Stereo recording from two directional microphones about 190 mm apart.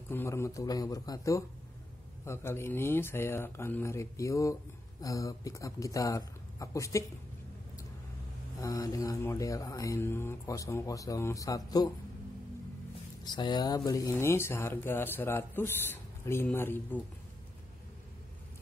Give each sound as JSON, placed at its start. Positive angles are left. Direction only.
{"t": 0.1, "sound": "speech", "side_deg": 15}
{"t": 8.5, "sound": "speech", "side_deg": 20}
{"t": 13.2, "sound": "speech", "side_deg": 20}